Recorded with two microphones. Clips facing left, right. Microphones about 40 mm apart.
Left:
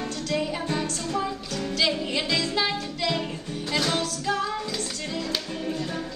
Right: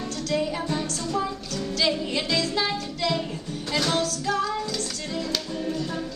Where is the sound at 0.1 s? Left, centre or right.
Centre.